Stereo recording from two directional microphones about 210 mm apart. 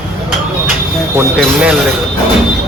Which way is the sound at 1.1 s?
5° right (ahead or behind).